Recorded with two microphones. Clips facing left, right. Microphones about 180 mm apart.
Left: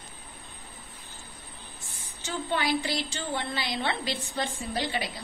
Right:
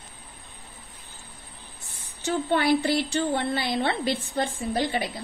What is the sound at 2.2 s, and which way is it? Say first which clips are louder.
A woman's voice: right 6 dB; 60° right (ahead or behind).